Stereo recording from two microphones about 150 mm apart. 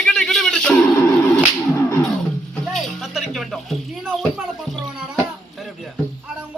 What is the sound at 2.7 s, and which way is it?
Music, centre (ahead or behind).